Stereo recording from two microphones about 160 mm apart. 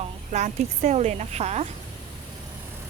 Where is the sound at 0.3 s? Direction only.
45° right (ahead or behind).